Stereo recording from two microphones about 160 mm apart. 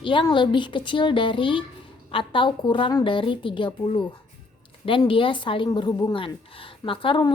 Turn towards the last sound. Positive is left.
turn(degrees=30)  # may be behind; listen again after turning